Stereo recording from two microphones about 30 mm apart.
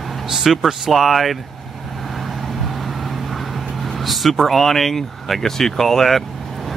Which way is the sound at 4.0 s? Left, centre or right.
Centre.